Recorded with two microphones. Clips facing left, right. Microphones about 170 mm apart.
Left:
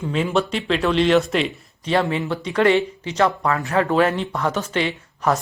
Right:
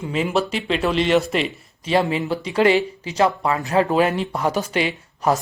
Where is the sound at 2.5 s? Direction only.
35° right (ahead or behind).